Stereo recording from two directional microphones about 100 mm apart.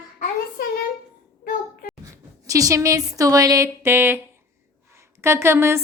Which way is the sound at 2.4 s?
35° right (ahead or behind).